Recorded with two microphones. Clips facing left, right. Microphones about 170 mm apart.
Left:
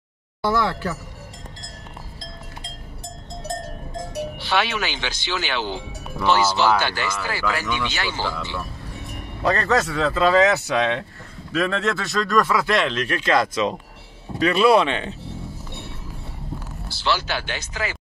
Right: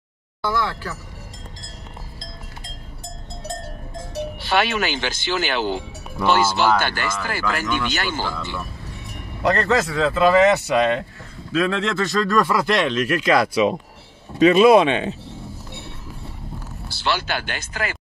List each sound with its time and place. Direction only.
4.4 s speech: 50° right (ahead or behind)
9.4 s speech: centre (ahead or behind); by 15.1 s 15° right (ahead or behind)
17.0 s speech: 55° right (ahead or behind)